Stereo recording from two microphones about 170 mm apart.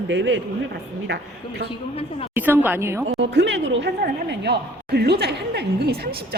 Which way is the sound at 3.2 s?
90° right.